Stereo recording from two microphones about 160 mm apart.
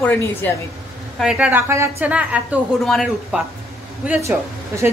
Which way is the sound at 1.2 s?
5° right (ahead or behind).